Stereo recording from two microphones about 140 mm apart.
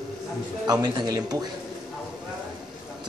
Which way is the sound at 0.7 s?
30° right (ahead or behind).